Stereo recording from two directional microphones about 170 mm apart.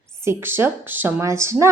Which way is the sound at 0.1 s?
15° right (ahead or behind).